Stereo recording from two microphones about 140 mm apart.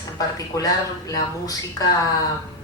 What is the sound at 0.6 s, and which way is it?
Speech, 25° left (ahead or behind).